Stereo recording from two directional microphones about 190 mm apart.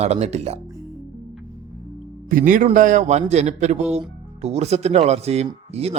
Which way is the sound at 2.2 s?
45° right (ahead or behind).